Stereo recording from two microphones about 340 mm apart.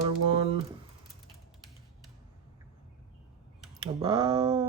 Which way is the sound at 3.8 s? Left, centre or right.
Centre.